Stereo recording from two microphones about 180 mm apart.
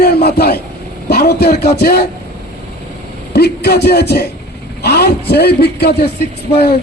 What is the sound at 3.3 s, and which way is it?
A man's voice, 65° left (ahead or behind).